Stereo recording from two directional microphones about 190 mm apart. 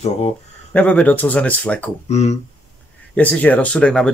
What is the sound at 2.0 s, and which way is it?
Speech, 35° left (ahead or behind).